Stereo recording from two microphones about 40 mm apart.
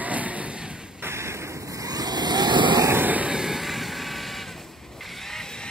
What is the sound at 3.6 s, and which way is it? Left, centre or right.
Vehicle, centre.